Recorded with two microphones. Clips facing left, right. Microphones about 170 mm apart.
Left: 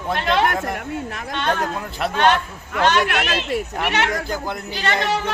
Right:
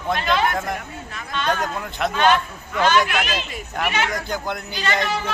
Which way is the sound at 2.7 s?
70° left (ahead or behind).